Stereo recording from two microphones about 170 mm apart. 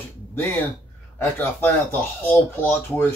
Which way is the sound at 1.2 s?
10° left (ahead or behind).